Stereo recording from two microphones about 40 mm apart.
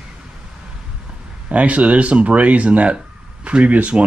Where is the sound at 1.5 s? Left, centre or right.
Right.